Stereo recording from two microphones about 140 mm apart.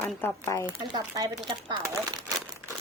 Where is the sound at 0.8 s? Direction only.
25° right (ahead or behind).